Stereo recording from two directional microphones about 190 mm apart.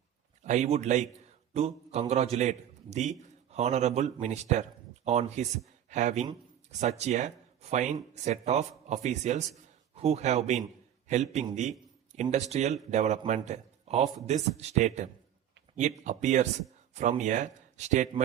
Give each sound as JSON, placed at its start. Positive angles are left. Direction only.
{"t": 0.4, "sound": "a man's voice", "side_deg": -40}